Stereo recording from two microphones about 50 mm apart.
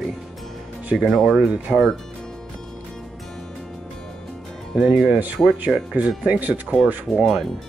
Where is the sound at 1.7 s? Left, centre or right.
Centre.